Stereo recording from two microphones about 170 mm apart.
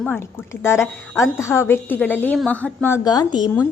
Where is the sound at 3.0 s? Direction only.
25° left (ahead or behind).